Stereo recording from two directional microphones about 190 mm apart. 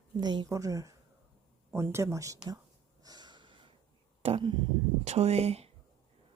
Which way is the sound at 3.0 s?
20° right (ahead or behind).